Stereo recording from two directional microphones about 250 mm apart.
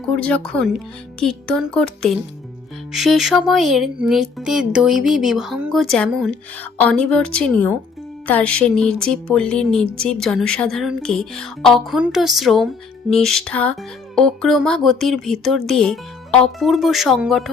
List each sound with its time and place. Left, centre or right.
0.2 s speech: centre